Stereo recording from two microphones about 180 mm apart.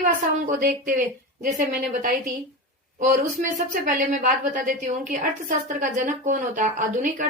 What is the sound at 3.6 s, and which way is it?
A woman's voice, 50° right (ahead or behind).